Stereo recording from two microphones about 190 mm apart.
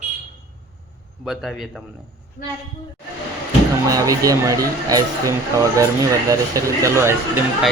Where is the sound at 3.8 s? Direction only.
20° right (ahead or behind).